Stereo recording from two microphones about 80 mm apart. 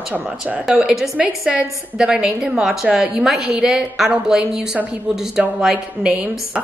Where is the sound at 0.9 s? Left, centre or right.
Centre.